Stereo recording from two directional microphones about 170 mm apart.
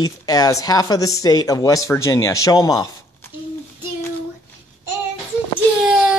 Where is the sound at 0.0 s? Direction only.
20° left (ahead or behind).